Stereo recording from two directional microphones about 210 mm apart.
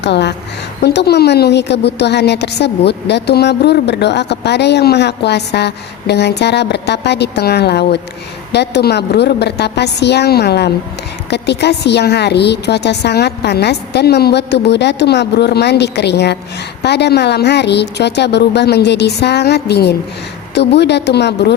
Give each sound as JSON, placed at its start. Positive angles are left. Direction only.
{"t": 0.0, "sound": "a woman's voice", "side_deg": 55}